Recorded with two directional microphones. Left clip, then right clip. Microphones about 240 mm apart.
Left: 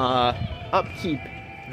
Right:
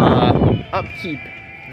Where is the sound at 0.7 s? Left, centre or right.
Centre.